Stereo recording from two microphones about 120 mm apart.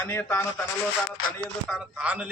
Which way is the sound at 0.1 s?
20° left (ahead or behind).